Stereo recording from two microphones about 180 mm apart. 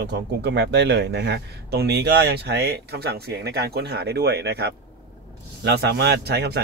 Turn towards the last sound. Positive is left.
turn(degrees=-65)  # may be behind; listen again after turning